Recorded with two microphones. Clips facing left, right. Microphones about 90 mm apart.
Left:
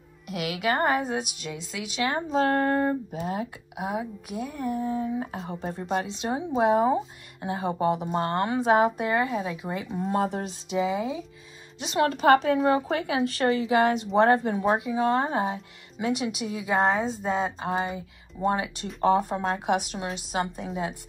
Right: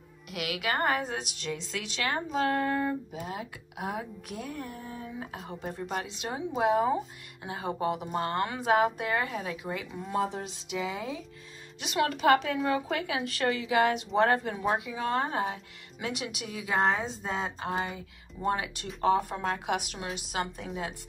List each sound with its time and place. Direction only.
0.3 s a woman's voice: 25° left (ahead or behind)
2.4 s a sound: 40° left (ahead or behind)
3.2 s speech: 35° left (ahead or behind)
3.7 s a woman's voice: 15° left (ahead or behind)
10.0 s a sound: 50° left (ahead or behind)
10.7 s a woman's voice: 25° left (ahead or behind)
11.8 s a woman's voice: 30° left (ahead or behind)